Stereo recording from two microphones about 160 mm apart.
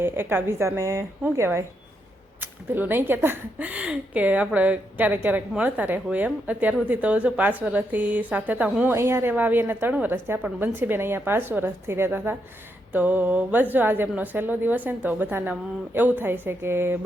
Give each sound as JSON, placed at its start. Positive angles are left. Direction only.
{"t": 0.0, "sound": "speech", "side_deg": -15}